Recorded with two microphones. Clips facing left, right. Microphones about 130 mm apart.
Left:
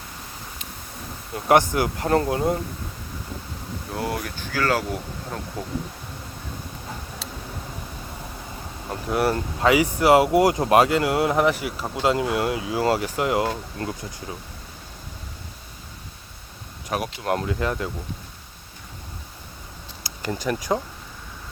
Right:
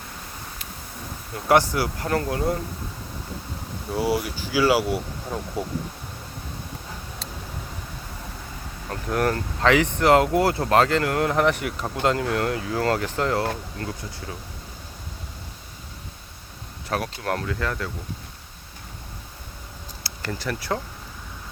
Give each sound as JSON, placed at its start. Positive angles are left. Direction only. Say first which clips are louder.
{"t": 1.5, "sound": "speech", "louder": "left 1 dB", "side_deg": 20}
{"t": 3.9, "sound": "speech", "louder": "right 5 dB", "side_deg": -5}
{"t": 8.9, "sound": "speech", "louder": "left 1 dB", "side_deg": 10}
{"t": 13.8, "sound": "speech", "louder": "left 2 dB", "side_deg": 25}
{"t": 16.9, "sound": "speech", "louder": "left 1 dB", "side_deg": 15}
{"t": 20.1, "sound": "speech", "louder": "left 4 dB", "side_deg": 15}